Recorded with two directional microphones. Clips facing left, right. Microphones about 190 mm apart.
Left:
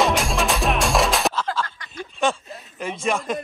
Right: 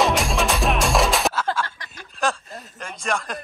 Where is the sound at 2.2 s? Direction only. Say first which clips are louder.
Left 2 dB; centre (ahead or behind).